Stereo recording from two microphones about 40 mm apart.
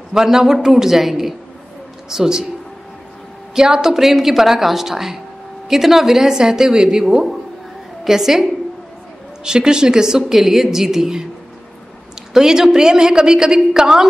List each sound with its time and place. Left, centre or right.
0.1 s a woman's voice: centre
3.5 s a woman's voice: centre
8.0 s a woman's voice: centre
9.4 s a woman's voice: centre
12.4 s a woman's voice: centre